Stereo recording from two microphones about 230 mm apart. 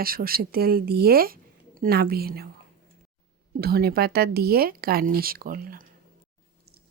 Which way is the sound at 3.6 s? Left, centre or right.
Right.